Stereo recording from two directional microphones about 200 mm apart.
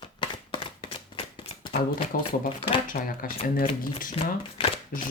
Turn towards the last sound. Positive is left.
turn(degrees=45)  # may be behind; listen again after turning